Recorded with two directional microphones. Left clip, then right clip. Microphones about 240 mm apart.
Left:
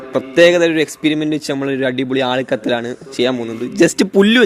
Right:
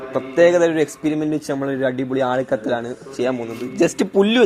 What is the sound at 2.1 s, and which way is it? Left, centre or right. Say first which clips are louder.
Speech: left 3 dB; left.